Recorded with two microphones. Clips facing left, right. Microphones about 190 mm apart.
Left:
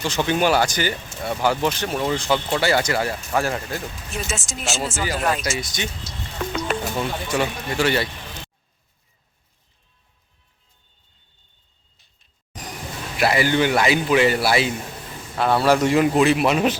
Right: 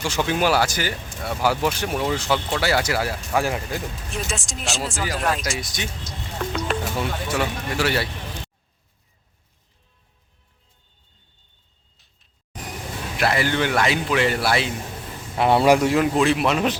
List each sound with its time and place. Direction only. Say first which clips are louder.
0.0 s speech: left 1 dB; 10° right (ahead or behind)
4.1 s speech: left 1 dB; centre (ahead or behind)
11.9 s a sound: right 1 dB; centre (ahead or behind)
13.1 s speech: left 3 dB; 5° left (ahead or behind)
15.4 s speech: right 2 dB; 20° right (ahead or behind)
15.9 s speech: left 2 dB; centre (ahead or behind)